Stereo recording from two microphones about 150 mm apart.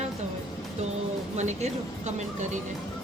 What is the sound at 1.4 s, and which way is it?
Speech, 50° right (ahead or behind).